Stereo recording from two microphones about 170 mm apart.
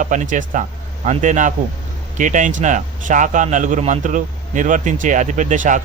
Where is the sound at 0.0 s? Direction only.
50° right (ahead or behind).